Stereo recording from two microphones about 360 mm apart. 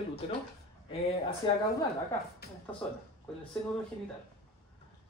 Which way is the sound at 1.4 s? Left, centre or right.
Centre.